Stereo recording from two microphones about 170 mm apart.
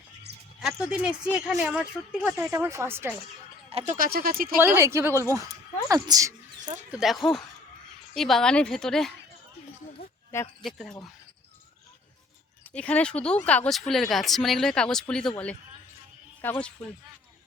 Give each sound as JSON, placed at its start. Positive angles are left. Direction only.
{"t": 0.8, "sound": "speech", "side_deg": -5}
{"t": 3.7, "sound": "speech", "side_deg": -35}
{"t": 3.9, "sound": "speech", "side_deg": -60}
{"t": 4.6, "sound": "speech", "side_deg": -15}
{"t": 6.9, "sound": "speech", "side_deg": 0}
{"t": 10.0, "sound": "speech", "side_deg": 35}
{"t": 10.6, "sound": "speech", "side_deg": 0}
{"t": 12.7, "sound": "speech", "side_deg": 5}